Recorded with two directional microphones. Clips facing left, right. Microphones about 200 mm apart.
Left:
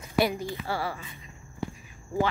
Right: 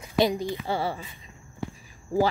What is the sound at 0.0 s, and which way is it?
A woman's voice, 20° right (ahead or behind).